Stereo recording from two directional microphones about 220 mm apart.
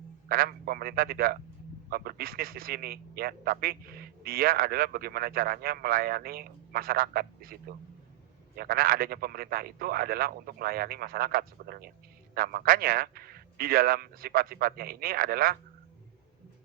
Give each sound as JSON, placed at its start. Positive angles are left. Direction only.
{"t": 0.3, "sound": "a man's voice", "side_deg": -45}